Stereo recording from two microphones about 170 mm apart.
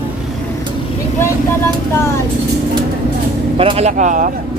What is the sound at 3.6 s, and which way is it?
Speech, 35° right (ahead or behind).